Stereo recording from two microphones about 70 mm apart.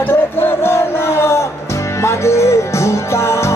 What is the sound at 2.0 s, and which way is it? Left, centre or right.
Music, left.